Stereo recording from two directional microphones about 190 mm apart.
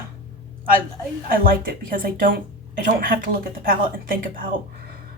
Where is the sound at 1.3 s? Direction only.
50° right (ahead or behind).